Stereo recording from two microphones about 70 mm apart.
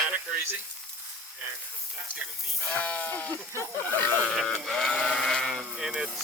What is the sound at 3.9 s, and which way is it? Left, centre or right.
Sheep, left.